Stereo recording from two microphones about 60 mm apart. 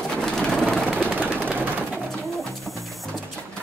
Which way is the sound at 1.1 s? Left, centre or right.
Right.